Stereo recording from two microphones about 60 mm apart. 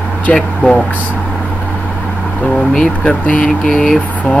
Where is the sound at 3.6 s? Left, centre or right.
Centre.